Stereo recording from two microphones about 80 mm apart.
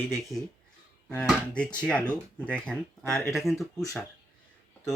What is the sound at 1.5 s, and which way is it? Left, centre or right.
Speech, centre.